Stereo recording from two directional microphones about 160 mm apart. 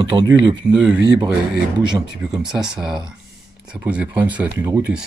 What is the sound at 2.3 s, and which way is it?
Speech, 5° right (ahead or behind).